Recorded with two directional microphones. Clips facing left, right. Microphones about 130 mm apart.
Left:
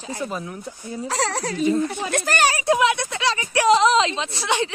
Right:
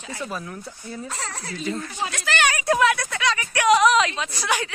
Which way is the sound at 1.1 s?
90° left.